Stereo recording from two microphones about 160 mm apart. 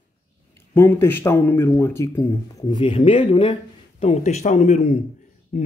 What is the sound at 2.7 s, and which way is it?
Speech, 35° left (ahead or behind).